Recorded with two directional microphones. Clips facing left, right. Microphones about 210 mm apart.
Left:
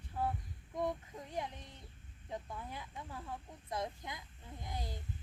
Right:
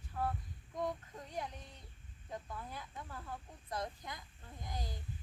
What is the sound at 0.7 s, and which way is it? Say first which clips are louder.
Speech: left 2 dB; 20° left (ahead or behind).